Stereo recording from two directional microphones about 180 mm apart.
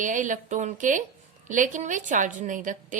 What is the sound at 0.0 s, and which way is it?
A woman's voice, 45° right (ahead or behind).